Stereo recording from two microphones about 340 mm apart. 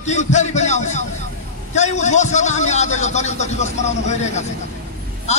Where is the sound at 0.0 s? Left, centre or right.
Left.